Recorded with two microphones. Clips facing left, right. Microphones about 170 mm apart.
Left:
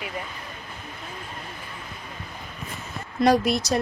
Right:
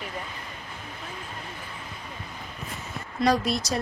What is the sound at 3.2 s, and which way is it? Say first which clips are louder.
Speech: left 4 dB; 65° left (ahead or behind).